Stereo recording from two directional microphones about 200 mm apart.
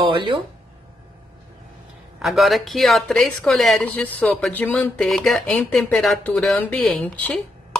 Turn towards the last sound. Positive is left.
turn(degrees=5)  # may be behind; listen again after turning